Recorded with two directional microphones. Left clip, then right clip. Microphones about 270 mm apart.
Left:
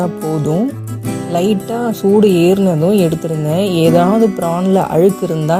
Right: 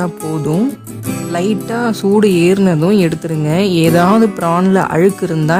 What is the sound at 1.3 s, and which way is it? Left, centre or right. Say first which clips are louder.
Speech: left 2 dB; right.